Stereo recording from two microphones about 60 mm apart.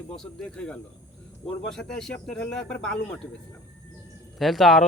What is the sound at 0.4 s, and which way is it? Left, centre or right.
Speech, centre.